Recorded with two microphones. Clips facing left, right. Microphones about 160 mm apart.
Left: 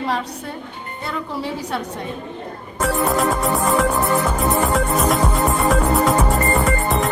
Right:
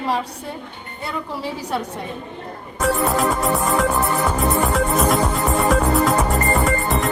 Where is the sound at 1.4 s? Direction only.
10° right (ahead or behind).